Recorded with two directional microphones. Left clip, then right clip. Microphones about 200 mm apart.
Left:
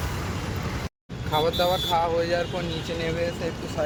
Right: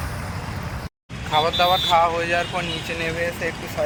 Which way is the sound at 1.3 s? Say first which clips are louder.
Right 5 dB; centre (ahead or behind).